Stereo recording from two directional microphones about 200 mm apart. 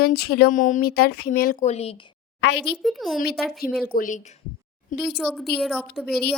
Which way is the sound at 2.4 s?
60° left (ahead or behind).